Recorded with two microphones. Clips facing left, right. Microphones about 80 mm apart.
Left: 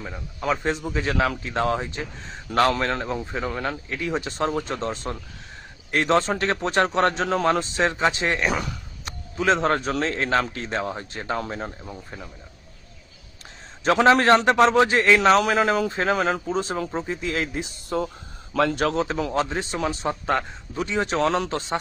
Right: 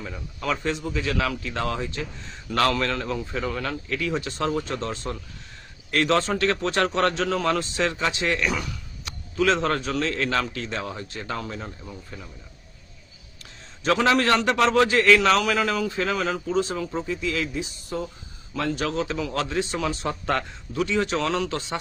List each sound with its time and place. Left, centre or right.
0.0 s a man's voice: centre; by 9.1 s left
9.4 s a man's voice: left
13.8 s a man's voice: left
16.7 s speech: left
19.0 s a man's voice: left
19.3 s a man's voice: left